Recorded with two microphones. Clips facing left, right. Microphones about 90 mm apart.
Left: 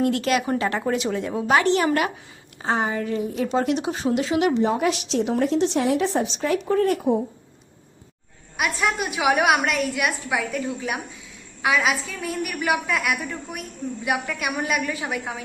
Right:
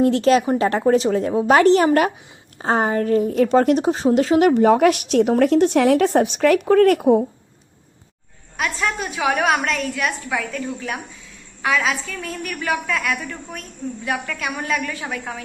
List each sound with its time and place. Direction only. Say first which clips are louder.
0.0 s a woman's voice: right 6 dB; 30° right (ahead or behind); by 4.7 s 50° right (ahead or behind)
4.7 s a woman's voice: right 7 dB; 60° right (ahead or behind)
8.5 s a woman's voice: even; 10° left (ahead or behind)